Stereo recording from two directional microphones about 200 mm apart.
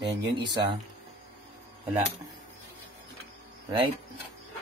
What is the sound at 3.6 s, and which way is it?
Speech, 25° right (ahead or behind).